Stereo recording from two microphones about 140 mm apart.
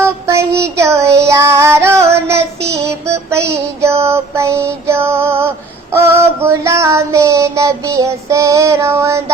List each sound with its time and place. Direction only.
0.0 s child singing: 20° right (ahead or behind)